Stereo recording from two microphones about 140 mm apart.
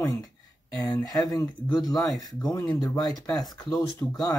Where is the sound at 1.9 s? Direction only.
Centre (ahead or behind).